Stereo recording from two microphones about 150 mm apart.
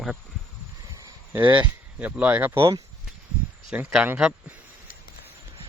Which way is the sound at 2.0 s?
10° right (ahead or behind).